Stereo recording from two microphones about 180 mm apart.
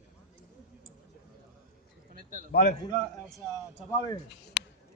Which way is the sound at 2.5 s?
60° left (ahead or behind).